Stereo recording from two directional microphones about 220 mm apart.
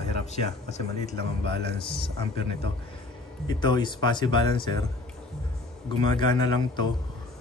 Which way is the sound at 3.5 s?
20° left (ahead or behind).